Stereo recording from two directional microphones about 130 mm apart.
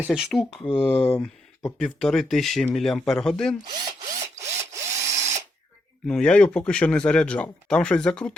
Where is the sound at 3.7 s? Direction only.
35° right (ahead or behind).